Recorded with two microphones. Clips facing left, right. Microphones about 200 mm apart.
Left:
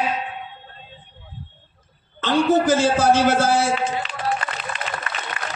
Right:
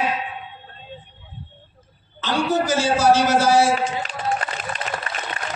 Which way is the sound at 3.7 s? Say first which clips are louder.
Even; 40° right (ahead or behind).